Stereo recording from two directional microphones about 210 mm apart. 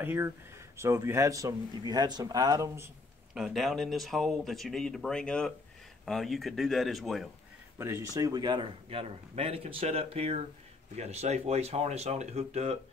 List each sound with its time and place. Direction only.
0.0 s speech: 10° right (ahead or behind)
3.3 s speech: centre (ahead or behind)
7.8 s a man's voice: 15° right (ahead or behind); by 12.7 s 30° right (ahead or behind)